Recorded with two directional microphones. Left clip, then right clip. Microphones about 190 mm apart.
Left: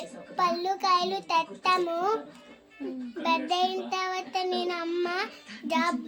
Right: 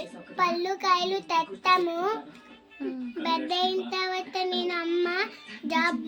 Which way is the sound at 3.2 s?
25° left (ahead or behind).